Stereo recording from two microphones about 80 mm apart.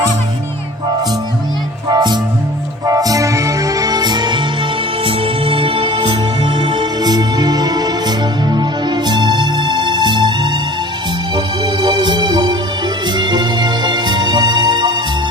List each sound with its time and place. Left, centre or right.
1.9 s music: right
2.8 s music: right
6.4 s music: right